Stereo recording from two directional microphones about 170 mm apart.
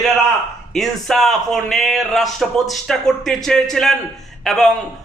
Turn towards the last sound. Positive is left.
turn(degrees=0)  # may be behind; listen again after turning